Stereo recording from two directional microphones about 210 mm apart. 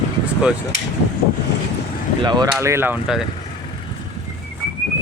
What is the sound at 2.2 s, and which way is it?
Speech, 20° right (ahead or behind).